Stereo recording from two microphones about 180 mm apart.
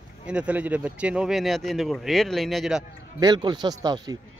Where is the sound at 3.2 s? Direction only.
25° right (ahead or behind).